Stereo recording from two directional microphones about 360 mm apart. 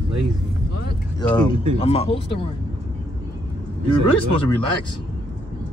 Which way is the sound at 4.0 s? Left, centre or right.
Right.